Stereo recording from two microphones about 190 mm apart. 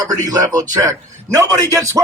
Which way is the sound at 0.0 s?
20° right (ahead or behind).